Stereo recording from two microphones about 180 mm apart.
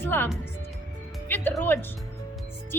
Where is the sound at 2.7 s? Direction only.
10° left (ahead or behind).